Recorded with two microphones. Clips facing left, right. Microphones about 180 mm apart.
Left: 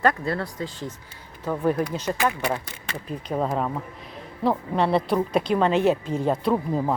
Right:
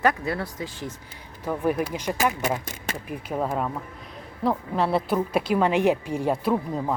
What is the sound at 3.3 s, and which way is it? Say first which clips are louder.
Speech: left 2 dB; centre (ahead or behind).